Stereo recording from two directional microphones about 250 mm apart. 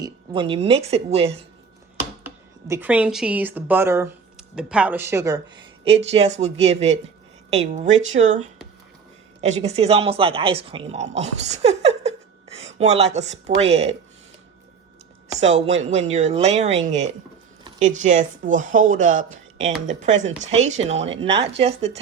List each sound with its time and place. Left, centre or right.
0.0 s a woman's voice: right
2.6 s speech: centre
5.8 s a woman's voice: right
15.4 s a woman's voice: right
17.6 s a sound: right
18.0 s a woman's voice: right